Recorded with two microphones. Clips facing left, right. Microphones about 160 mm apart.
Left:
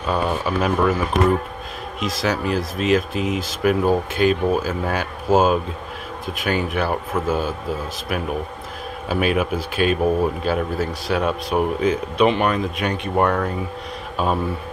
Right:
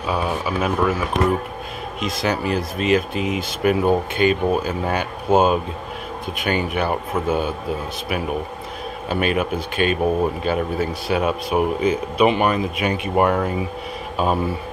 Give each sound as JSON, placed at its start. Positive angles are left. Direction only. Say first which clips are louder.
{"t": 0.0, "sound": "speech", "louder": "left 1 dB", "side_deg": -5}
{"t": 9.1, "sound": "speech", "louder": "left 1 dB", "side_deg": 5}